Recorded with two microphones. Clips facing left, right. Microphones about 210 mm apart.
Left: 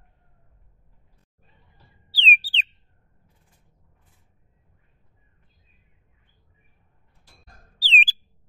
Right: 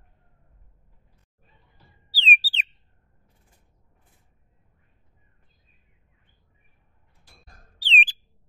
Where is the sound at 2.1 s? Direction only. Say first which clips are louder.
Even; 5° right (ahead or behind).